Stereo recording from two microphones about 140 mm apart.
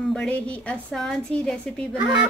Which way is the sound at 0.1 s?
5° left (ahead or behind).